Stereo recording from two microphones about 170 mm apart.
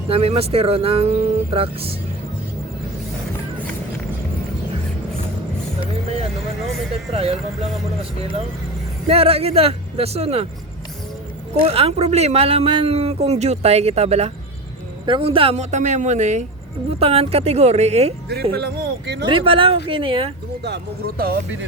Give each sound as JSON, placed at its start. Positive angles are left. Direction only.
{"t": 0.1, "sound": "speech", "side_deg": -35}
{"t": 6.9, "sound": "speech", "side_deg": -35}
{"t": 9.0, "sound": "speech", "side_deg": -35}
{"t": 11.6, "sound": "speech", "side_deg": -35}
{"t": 18.5, "sound": "speech", "side_deg": -70}
{"t": 19.3, "sound": "speech", "side_deg": -30}
{"t": 20.7, "sound": "speech", "side_deg": -75}